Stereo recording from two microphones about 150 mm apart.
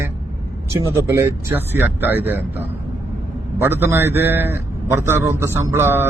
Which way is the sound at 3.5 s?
15° right (ahead or behind).